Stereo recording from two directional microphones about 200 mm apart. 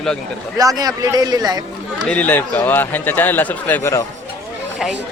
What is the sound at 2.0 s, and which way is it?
Speech, 10° left (ahead or behind).